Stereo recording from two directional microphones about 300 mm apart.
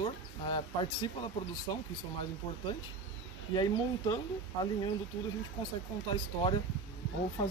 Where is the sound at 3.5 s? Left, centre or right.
Centre.